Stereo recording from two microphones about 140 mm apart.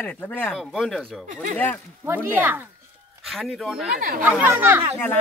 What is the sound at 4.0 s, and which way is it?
Speech, 85° right.